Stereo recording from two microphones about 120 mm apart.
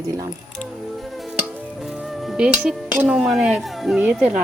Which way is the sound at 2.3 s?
5° right (ahead or behind).